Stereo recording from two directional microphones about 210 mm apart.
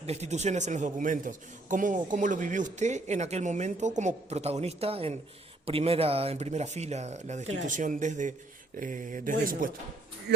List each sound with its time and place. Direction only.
0.0 s speech: 30° right (ahead or behind)
7.4 s speech: 60° right (ahead or behind)
7.7 s speech: 40° right (ahead or behind)
10.3 s speech: 50° right (ahead or behind)